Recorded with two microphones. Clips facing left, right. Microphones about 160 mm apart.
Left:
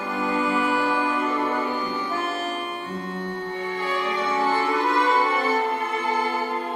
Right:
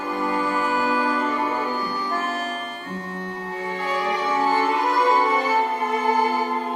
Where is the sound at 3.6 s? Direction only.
35° right (ahead or behind).